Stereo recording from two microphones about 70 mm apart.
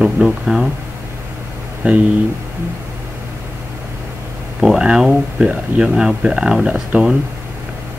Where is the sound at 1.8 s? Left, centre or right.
Centre.